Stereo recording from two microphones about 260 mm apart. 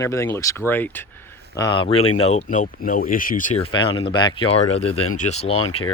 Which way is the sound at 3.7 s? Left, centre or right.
Centre.